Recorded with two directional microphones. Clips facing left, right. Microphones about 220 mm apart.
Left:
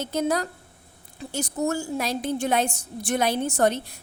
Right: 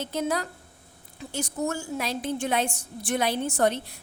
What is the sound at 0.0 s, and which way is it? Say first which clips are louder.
A woman's voice: left 3 dB; 40° left (ahead or behind).